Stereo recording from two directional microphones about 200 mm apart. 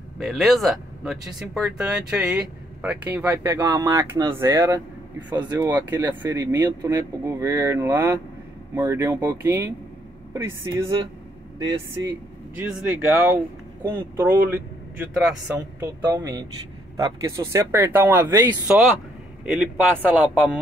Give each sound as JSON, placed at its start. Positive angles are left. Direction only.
{"t": 0.2, "sound": "speech", "side_deg": 0}
{"t": 12.5, "sound": "speech", "side_deg": -10}
{"t": 16.2, "sound": "a man's voice", "side_deg": -20}